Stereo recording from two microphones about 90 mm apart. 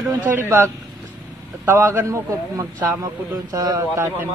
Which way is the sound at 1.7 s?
35° right (ahead or behind).